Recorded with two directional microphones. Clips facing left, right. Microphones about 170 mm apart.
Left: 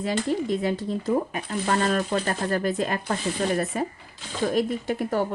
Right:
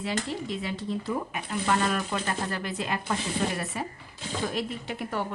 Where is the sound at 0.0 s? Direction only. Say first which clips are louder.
Left 6 dB; 45° left (ahead or behind).